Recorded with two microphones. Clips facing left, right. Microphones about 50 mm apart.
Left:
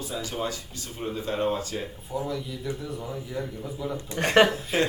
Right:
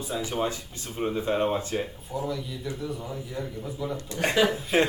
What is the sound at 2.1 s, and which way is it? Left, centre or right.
A man's voice, centre.